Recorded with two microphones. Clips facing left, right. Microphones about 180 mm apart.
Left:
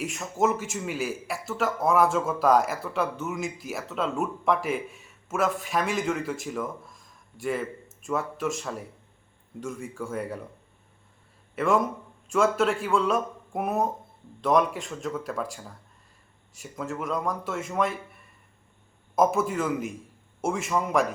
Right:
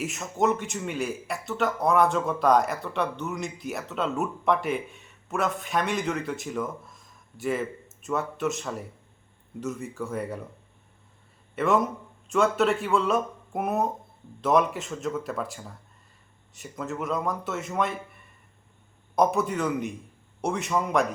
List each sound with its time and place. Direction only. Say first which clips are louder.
0.0 s a man's voice: even; centre (ahead or behind)
11.5 s a man's voice: even; centre (ahead or behind)